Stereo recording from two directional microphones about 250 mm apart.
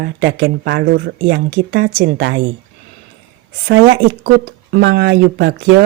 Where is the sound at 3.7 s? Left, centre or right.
Right.